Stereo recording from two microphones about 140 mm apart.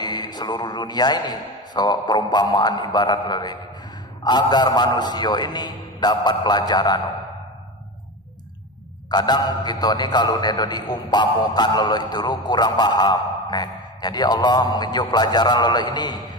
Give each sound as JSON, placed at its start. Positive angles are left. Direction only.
{"t": 0.0, "sound": "a man's voice", "side_deg": 30}
{"t": 9.1, "sound": "a man's voice", "side_deg": 30}